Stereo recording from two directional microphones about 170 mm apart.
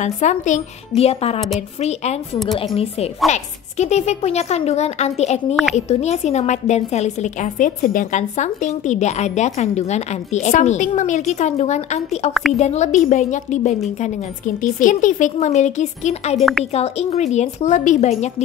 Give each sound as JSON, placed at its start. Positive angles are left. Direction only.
{"t": 0.0, "sound": "a woman's voice", "side_deg": 45}
{"t": 2.3, "sound": "speech", "side_deg": 0}
{"t": 2.6, "sound": "a woman's voice", "side_deg": 35}